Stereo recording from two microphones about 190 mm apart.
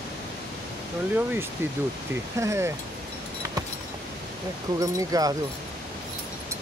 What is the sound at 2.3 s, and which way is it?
Speech, 15° right (ahead or behind).